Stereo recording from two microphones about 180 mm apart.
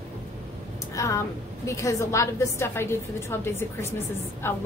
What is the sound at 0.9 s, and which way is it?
A woman's voice, 15° left (ahead or behind).